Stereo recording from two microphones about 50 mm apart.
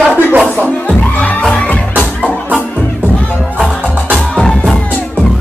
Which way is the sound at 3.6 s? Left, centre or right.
Centre.